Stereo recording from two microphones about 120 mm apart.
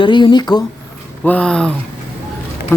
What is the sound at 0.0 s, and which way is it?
Speech, 40° left (ahead or behind).